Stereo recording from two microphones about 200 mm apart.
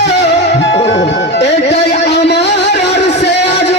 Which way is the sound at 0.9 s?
60° left (ahead or behind).